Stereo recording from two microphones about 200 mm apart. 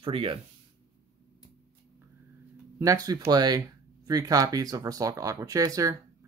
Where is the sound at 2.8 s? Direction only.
15° right (ahead or behind).